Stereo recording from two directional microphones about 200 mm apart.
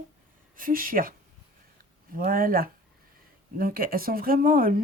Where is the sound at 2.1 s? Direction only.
45° right (ahead or behind).